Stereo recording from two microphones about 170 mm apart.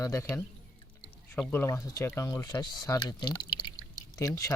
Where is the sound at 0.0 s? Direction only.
15° left (ahead or behind).